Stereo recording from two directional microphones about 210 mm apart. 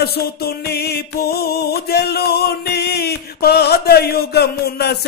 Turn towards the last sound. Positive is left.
turn(degrees=50)  # may be behind; listen again after turning